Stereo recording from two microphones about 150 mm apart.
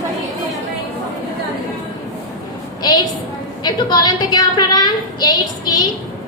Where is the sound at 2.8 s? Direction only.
30° left (ahead or behind).